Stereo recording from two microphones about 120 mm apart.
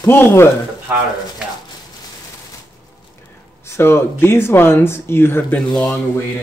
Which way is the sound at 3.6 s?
20° left (ahead or behind).